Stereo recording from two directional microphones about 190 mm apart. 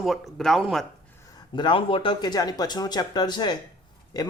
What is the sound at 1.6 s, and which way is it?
Speech, 25° left (ahead or behind).